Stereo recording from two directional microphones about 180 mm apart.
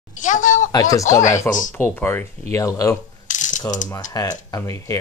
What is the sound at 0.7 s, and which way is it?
Speech, 20° left (ahead or behind).